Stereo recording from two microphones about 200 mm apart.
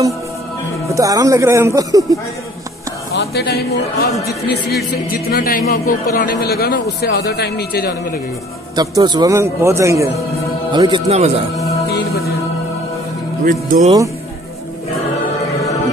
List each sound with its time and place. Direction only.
0.8 s a man's voice: 15° right (ahead or behind)
3.2 s a man's voice: 55° left (ahead or behind)
8.7 s a man's voice: 20° right (ahead or behind)
11.9 s music: 50° left (ahead or behind)
13.4 s speech: 45° right (ahead or behind)